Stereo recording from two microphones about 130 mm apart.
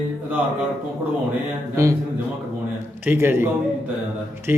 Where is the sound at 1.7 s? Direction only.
25° right (ahead or behind).